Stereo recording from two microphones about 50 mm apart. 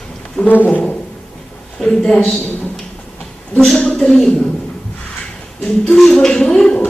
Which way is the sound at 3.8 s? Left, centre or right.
Centre.